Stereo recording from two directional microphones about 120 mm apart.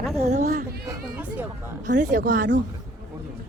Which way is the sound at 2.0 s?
90° right.